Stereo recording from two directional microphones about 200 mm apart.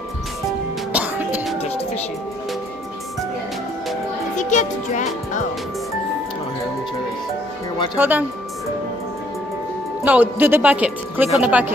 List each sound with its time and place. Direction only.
0.9 s music: 5° right (ahead or behind)
4.4 s music: 40° left (ahead or behind)
7.9 s speech: 10° right (ahead or behind)
10.0 s speech: 10° right (ahead or behind)